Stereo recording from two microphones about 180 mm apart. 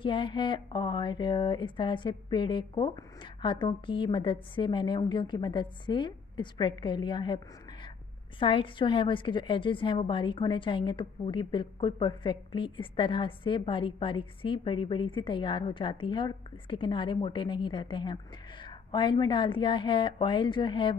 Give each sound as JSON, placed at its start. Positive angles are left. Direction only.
{"t": 0.0, "sound": "a woman's voice", "side_deg": 30}
{"t": 8.4, "sound": "a woman's voice", "side_deg": 30}